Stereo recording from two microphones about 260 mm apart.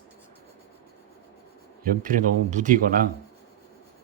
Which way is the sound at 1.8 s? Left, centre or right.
Right.